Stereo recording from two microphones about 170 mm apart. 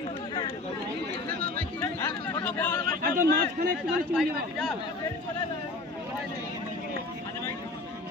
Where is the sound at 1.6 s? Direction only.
15° left (ahead or behind).